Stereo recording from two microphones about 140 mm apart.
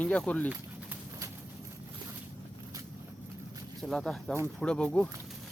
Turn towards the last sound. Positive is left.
turn(degrees=10)  # may be behind; listen again after turning